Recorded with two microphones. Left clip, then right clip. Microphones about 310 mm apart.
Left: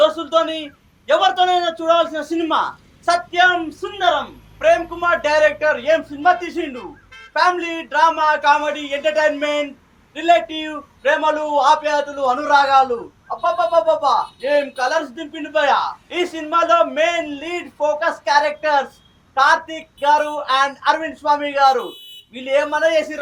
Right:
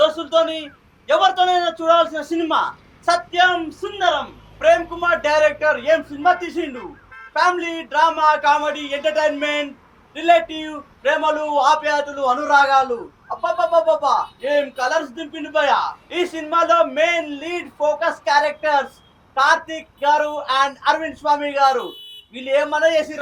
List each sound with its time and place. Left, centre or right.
0.0 s a man's voice: right
4.6 s a man's voice: right